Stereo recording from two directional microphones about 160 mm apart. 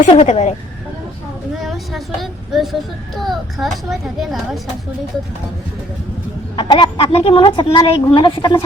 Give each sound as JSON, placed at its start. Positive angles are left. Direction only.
{"t": 0.1, "sound": "speech", "side_deg": 40}
{"t": 1.5, "sound": "a child's voice", "side_deg": 0}
{"t": 6.6, "sound": "a woman's voice", "side_deg": 30}